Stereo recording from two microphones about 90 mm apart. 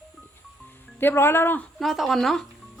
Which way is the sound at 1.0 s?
25° left (ahead or behind).